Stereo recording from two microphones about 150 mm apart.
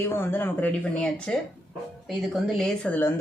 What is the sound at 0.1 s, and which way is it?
Speech, 15° left (ahead or behind).